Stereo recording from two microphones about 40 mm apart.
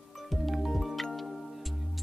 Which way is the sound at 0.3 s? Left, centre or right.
Centre.